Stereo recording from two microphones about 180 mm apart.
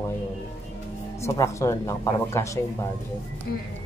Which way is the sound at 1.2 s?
15° left (ahead or behind).